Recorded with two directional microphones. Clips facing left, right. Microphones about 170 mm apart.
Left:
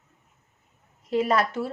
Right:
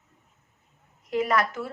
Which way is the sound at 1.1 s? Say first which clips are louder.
Left 2 dB; 30° left (ahead or behind).